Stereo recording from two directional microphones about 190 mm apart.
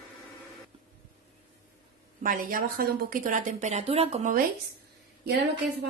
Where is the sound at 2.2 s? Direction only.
50° right (ahead or behind).